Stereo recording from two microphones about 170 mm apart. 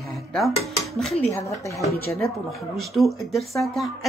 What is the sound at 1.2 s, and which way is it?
Speech, 15° left (ahead or behind).